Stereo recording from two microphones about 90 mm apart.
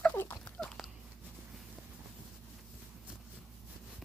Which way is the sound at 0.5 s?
5° left (ahead or behind).